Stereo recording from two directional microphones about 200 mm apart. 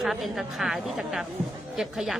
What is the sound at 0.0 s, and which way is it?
A woman's voice, centre (ahead or behind).